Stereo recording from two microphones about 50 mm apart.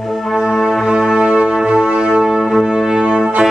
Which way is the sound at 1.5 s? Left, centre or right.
Centre.